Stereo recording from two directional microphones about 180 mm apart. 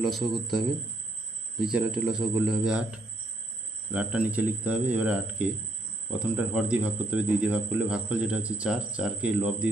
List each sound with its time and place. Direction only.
0.0 s speech: centre (ahead or behind)